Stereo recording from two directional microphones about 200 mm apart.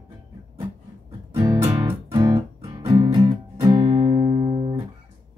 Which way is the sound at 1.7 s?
15° right (ahead or behind).